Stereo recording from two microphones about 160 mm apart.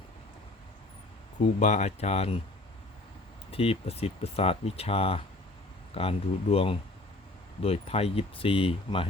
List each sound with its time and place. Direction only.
1.5 s speech: 45° left (ahead or behind)
3.5 s speech: 35° left (ahead or behind)